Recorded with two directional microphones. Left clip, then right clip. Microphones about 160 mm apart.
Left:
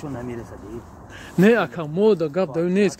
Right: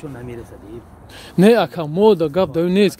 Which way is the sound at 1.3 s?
90° right.